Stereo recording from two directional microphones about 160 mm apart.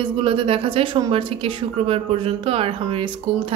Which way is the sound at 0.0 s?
35° right (ahead or behind).